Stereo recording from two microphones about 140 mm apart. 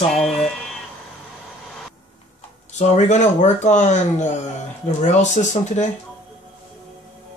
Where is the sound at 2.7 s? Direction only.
55° left (ahead or behind).